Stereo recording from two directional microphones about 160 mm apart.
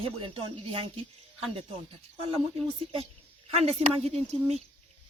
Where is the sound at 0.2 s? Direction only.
35° right (ahead or behind).